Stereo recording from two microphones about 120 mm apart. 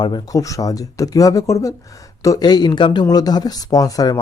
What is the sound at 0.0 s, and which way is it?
Speech, 35° left (ahead or behind).